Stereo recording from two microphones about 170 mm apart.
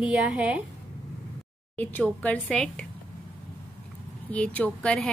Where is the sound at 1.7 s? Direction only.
10° left (ahead or behind).